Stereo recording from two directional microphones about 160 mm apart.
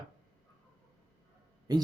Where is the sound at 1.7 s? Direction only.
25° right (ahead or behind).